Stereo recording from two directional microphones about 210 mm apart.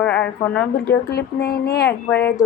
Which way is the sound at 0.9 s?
50° left (ahead or behind).